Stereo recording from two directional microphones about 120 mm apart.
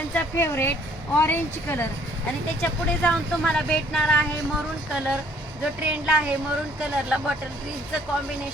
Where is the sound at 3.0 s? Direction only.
5° left (ahead or behind).